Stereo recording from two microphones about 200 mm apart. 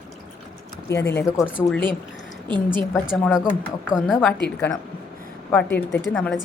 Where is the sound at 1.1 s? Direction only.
15° left (ahead or behind).